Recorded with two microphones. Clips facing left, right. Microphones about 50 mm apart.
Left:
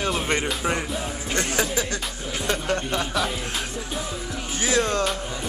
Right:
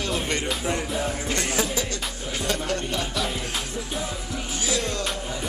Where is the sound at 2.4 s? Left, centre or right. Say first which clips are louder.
Left 2 dB; left.